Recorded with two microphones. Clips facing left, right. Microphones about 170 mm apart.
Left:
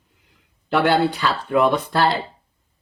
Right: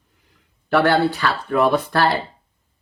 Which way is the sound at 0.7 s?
20° left (ahead or behind).